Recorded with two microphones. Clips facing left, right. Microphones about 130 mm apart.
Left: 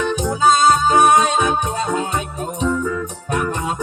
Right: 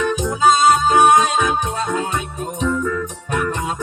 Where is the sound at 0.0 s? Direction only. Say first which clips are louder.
Even; 30° left (ahead or behind).